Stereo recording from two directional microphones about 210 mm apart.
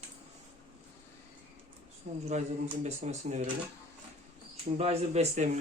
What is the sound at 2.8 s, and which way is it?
Speech, 30° right (ahead or behind).